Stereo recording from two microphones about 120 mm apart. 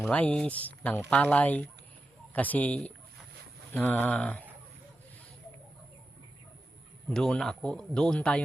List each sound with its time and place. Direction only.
0.1 s speech: 10° left (ahead or behind)
7.1 s speech: 5° left (ahead or behind)